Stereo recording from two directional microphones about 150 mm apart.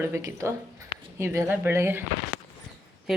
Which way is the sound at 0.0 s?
20° right (ahead or behind).